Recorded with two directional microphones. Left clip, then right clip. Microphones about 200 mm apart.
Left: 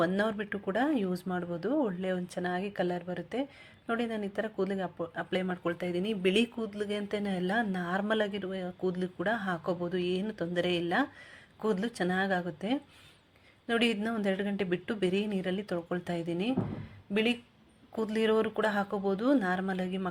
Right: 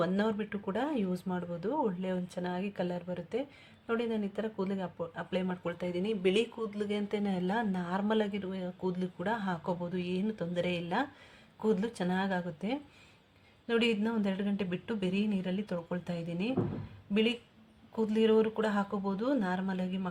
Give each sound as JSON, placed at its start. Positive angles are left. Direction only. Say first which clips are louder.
{"t": 0.0, "sound": "speech", "louder": "left 2 dB", "side_deg": 0}
{"t": 17.9, "sound": "speech", "louder": "right 1 dB", "side_deg": 10}